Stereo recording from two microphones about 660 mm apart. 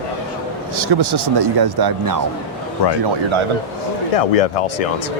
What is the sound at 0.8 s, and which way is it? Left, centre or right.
Speech, right.